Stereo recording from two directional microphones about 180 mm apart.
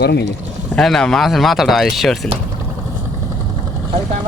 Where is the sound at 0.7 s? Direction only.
5° left (ahead or behind).